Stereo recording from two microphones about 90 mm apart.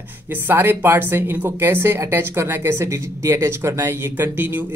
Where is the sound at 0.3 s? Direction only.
25° right (ahead or behind).